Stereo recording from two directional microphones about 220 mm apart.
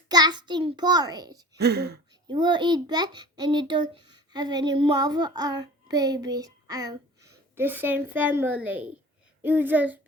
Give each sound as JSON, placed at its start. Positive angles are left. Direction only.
{"t": 0.1, "sound": "a child's voice", "side_deg": -20}
{"t": 1.5, "sound": "speech", "side_deg": -50}
{"t": 2.2, "sound": "a child's voice", "side_deg": -20}